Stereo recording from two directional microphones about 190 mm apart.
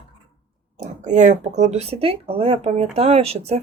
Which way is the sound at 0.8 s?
40° right (ahead or behind).